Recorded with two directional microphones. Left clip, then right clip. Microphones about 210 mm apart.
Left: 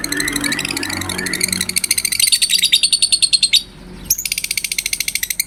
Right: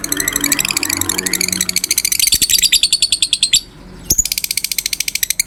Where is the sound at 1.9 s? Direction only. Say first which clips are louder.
Right 2 dB; 25° right (ahead or behind).